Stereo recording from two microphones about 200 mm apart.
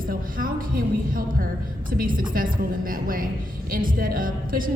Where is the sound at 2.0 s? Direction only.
45° right (ahead or behind).